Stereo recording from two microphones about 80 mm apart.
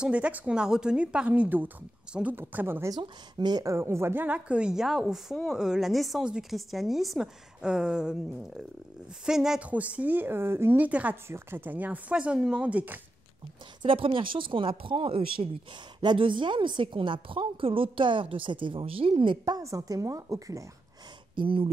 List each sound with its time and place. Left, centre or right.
0.0 s a woman's voice: centre
3.0 s speech: right
3.6 s a woman's voice: right; by 9.7 s centre
9.7 s speech: centre
10.8 s speech: centre
11.2 s speech: right
13.8 s a woman's voice: right
19.6 s a woman's voice: right